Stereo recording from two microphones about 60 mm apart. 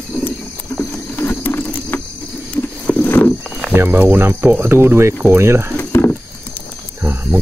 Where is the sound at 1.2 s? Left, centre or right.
Left.